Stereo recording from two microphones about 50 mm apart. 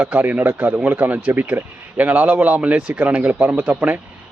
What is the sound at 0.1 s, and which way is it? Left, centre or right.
Speech, right.